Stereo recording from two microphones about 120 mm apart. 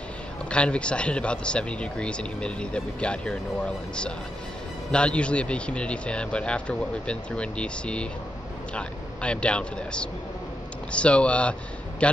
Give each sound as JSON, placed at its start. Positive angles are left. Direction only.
{"t": 0.5, "sound": "speech", "side_deg": 10}